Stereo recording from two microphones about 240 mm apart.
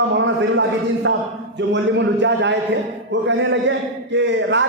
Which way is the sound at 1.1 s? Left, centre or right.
Right.